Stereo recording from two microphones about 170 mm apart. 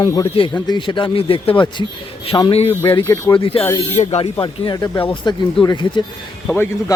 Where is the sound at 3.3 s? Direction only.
30° left (ahead or behind).